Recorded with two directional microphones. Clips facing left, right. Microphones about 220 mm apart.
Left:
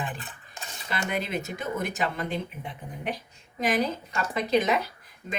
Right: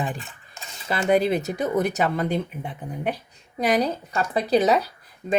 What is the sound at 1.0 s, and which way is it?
Speech, 35° right (ahead or behind).